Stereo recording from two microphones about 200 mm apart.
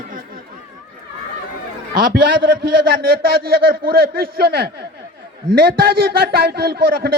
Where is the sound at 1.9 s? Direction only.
45° right (ahead or behind).